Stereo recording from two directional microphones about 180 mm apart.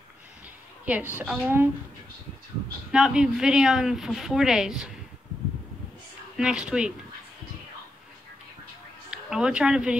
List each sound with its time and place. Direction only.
0.8 s a woman's voice: 10° right (ahead or behind)
2.9 s a woman's voice: 5° right (ahead or behind)
6.3 s a woman's voice: 5° right (ahead or behind)
9.1 s speech: 5° right (ahead or behind)